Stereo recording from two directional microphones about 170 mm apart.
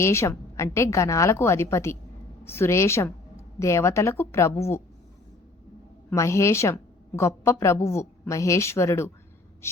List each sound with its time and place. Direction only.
0.0 s a woman's voice: 15° left (ahead or behind)
6.1 s a woman's voice: 15° left (ahead or behind)